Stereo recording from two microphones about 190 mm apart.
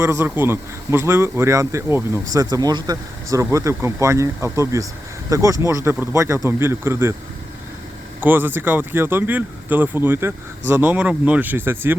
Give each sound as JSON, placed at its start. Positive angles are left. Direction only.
{"t": 0.0, "sound": "speech", "side_deg": -15}
{"t": 8.2, "sound": "speech", "side_deg": -10}